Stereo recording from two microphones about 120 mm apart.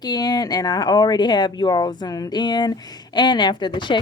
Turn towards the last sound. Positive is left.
turn(degrees=40)  # may be behind; listen again after turning